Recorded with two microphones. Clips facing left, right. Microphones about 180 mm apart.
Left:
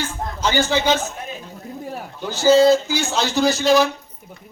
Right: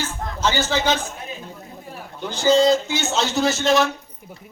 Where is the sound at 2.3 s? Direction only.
5° left (ahead or behind).